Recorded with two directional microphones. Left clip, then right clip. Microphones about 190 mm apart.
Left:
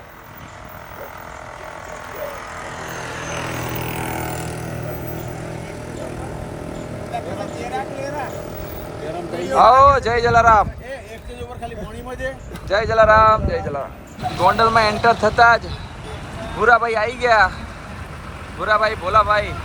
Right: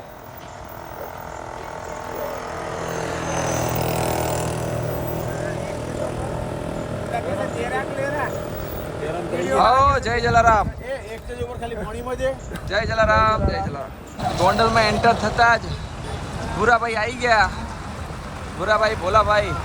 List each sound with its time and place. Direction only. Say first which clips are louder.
2.6 s vehicle: right 2 dB; 30° right (ahead or behind); by 4.7 s 55° right (ahead or behind)
7.1 s a sound: right 2 dB; centre (ahead or behind)
9.5 s a man's voice: left 5 dB; 5° right (ahead or behind)
12.6 s speech: left 5 dB; 5° right (ahead or behind)
18.6 s a man's voice: left 1 dB; 10° right (ahead or behind)